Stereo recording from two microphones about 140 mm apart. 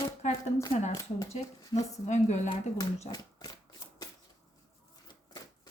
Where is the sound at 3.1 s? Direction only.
30° left (ahead or behind).